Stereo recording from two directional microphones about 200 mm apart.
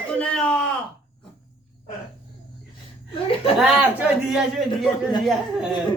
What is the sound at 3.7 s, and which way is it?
A man's voice, 5° right (ahead or behind).